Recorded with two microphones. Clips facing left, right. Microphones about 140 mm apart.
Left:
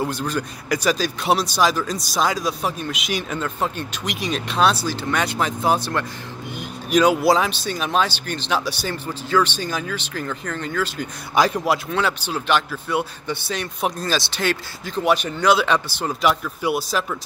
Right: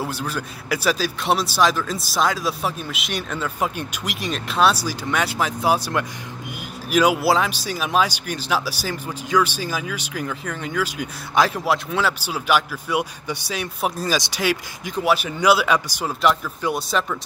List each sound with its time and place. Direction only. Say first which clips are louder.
0.0 s a man's voice: left 3 dB; 5° right (ahead or behind)
16.2 s a man's voice: right 1 dB; 5° left (ahead or behind)